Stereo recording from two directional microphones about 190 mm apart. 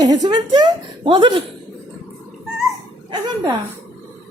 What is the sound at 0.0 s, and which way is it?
A woman's voice, 20° right (ahead or behind).